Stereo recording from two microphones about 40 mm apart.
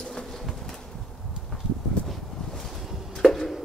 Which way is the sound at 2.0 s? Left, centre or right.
Left.